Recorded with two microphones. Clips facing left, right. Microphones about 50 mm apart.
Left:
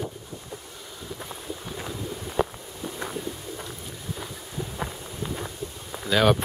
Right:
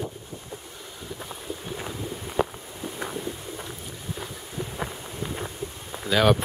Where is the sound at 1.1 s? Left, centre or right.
Centre.